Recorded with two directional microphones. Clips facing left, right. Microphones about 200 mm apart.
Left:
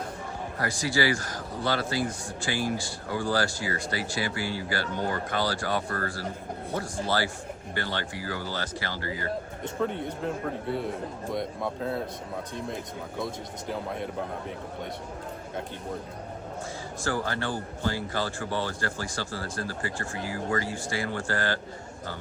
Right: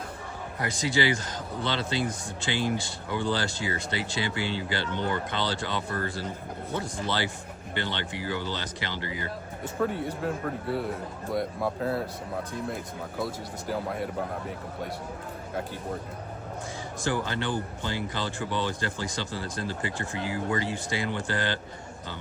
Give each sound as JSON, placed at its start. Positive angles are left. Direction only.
{"t": 0.6, "sound": "speech", "side_deg": -20}
{"t": 7.8, "sound": "speech", "side_deg": -20}
{"t": 9.6, "sound": "speech", "side_deg": -5}
{"t": 17.0, "sound": "speech", "side_deg": -20}